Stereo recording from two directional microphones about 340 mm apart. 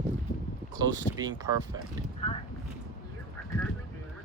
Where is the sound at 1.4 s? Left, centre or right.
Centre.